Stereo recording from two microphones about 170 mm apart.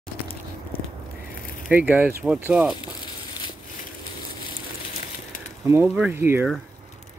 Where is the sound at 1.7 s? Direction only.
10° right (ahead or behind).